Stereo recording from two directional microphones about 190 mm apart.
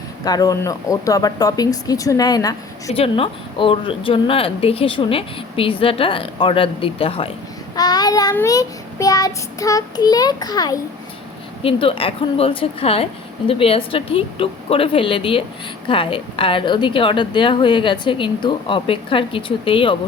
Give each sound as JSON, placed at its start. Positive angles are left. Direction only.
{"t": 0.3, "sound": "a woman's voice", "side_deg": 20}